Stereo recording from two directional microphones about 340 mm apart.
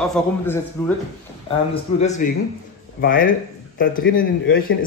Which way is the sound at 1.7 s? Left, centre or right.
Centre.